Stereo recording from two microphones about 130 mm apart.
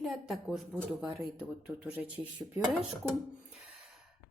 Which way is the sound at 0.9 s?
10° right (ahead or behind).